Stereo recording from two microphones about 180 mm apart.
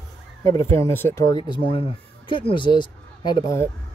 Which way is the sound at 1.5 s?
30° left (ahead or behind).